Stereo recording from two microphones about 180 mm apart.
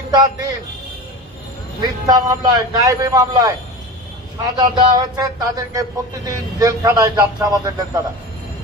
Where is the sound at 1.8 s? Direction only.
20° right (ahead or behind).